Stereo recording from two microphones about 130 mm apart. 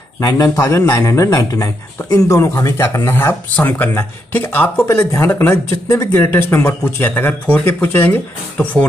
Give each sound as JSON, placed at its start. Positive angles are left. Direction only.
{"t": 0.2, "sound": "speech", "side_deg": 25}